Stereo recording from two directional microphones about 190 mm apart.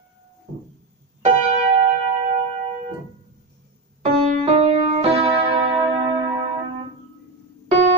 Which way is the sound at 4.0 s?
30° right (ahead or behind).